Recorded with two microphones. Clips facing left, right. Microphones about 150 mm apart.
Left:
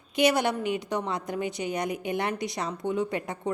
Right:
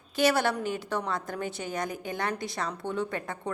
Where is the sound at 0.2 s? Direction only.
20° left (ahead or behind).